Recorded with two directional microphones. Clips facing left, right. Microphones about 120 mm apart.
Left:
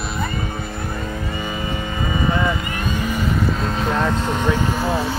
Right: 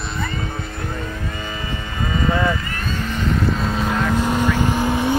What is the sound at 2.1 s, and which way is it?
Vehicle, 15° left (ahead or behind).